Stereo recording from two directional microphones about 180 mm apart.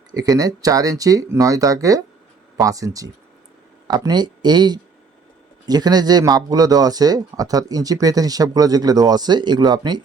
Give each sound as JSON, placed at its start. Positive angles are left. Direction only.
{"t": 0.1, "sound": "speech", "side_deg": -20}